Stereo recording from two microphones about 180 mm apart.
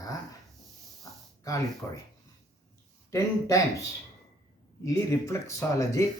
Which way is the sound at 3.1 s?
15° left (ahead or behind).